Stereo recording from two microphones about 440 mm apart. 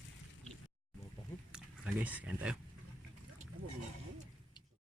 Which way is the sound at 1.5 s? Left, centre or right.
Centre.